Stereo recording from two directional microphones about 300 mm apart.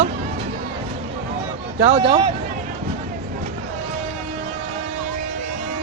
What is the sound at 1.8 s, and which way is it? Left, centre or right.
Speech, centre.